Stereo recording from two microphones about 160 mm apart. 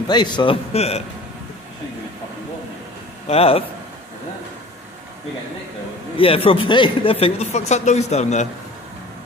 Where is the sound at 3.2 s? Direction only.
40° left (ahead or behind).